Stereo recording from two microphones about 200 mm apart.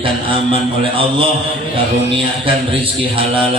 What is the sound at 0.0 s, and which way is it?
A man's voice, 25° right (ahead or behind).